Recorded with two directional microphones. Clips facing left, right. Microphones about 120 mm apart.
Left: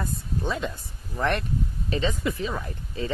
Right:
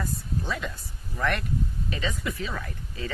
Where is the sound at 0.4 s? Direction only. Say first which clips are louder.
Left 5 dB; 20° left (ahead or behind).